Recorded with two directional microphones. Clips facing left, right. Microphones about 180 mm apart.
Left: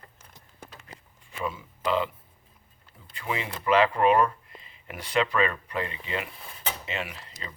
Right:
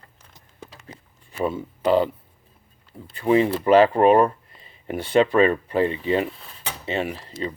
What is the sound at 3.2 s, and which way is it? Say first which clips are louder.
Speech: right 13 dB; 35° right (ahead or behind).